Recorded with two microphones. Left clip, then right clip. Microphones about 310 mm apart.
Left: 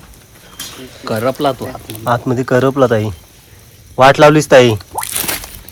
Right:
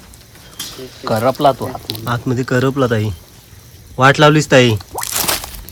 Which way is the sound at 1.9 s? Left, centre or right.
Centre.